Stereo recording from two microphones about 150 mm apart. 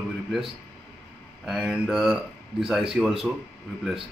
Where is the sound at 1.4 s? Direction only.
Centre (ahead or behind).